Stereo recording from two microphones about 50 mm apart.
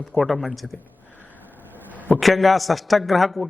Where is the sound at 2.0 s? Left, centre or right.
Left.